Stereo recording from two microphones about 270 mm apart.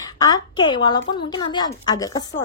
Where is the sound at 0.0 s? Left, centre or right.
Centre.